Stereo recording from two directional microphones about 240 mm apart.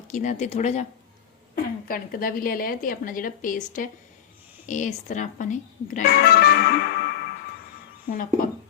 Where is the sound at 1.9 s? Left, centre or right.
Left.